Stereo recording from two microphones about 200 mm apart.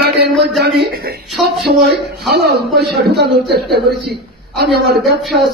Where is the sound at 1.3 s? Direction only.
Centre (ahead or behind).